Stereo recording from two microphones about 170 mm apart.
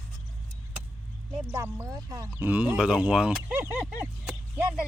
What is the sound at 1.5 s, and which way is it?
Speech, 10° right (ahead or behind).